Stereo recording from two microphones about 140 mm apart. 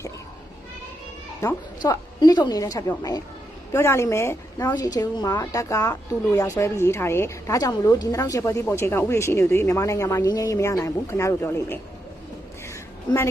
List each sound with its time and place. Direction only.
1.8 s a woman's voice: 30° left (ahead or behind)